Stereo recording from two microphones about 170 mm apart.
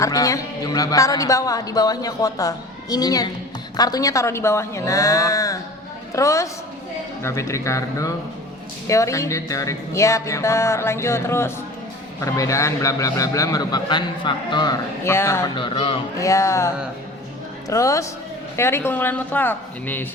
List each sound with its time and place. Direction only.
0.0 s speech: 20° left (ahead or behind)
7.2 s music: 15° left (ahead or behind)
12.2 s speech: 20° left (ahead or behind)
15.5 s speech: 30° left (ahead or behind)
16.1 s music: 20° left (ahead or behind)
17.7 s speech: 20° left (ahead or behind)
18.5 s music: 15° left (ahead or behind)